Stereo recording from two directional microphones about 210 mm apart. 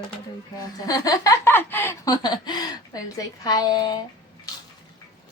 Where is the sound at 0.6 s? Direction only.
15° left (ahead or behind).